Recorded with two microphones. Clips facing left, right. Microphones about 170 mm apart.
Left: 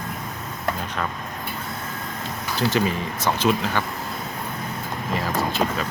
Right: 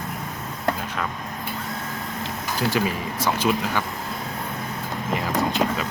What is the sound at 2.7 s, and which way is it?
Speech, 10° right (ahead or behind).